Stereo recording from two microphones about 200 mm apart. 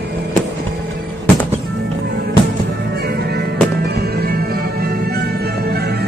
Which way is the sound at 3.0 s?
55° right (ahead or behind).